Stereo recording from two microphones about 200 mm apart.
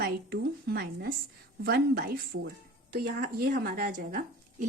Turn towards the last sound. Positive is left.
turn(degrees=-45)  # may be behind; listen again after turning